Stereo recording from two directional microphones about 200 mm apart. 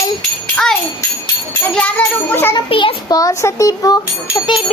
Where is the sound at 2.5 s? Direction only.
25° left (ahead or behind).